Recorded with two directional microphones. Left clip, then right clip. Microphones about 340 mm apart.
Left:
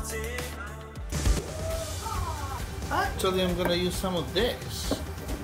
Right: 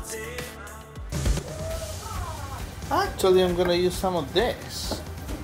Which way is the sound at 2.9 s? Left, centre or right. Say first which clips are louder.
Right 6 dB; right.